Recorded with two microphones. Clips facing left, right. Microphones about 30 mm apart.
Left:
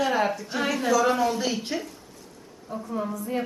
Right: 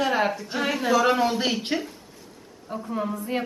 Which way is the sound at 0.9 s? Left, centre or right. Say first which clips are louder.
Right 2 dB; right.